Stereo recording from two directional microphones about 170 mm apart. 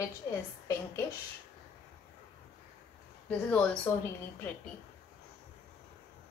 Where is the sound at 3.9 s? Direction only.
10° left (ahead or behind).